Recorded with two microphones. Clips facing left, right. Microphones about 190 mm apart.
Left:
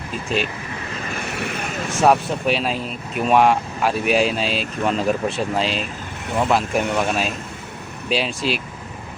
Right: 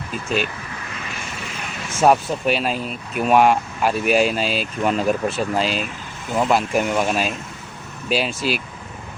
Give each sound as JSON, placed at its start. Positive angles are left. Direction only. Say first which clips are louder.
{"t": 1.3, "sound": "vehicle", "louder": "left 6 dB", "side_deg": 65}
{"t": 2.0, "sound": "speech", "louder": "right 1 dB", "side_deg": 0}